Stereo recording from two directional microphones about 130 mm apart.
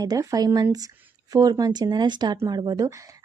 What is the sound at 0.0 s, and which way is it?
A woman's voice, 30° right (ahead or behind).